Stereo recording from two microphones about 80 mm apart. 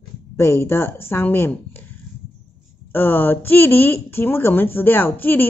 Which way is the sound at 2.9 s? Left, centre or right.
Left.